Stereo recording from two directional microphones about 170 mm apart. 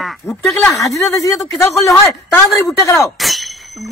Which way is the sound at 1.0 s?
Centre (ahead or behind).